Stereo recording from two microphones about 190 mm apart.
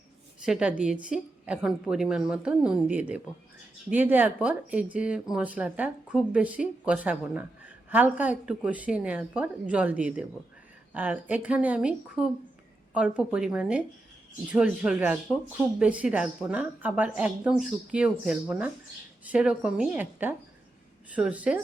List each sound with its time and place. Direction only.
0.4 s a woman's voice: 5° right (ahead or behind)